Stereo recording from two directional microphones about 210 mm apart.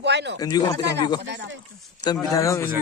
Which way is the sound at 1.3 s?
60° right (ahead or behind).